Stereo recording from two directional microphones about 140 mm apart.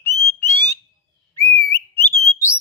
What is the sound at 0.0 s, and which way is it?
Frog, 20° left (ahead or behind).